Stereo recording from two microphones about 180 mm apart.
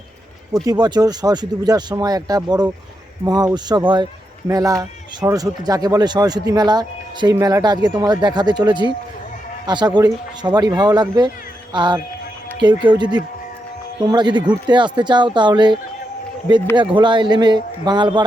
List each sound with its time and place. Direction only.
0.5 s speech: 20° right (ahead or behind)